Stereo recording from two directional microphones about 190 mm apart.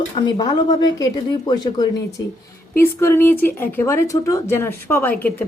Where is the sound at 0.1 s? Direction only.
20° left (ahead or behind).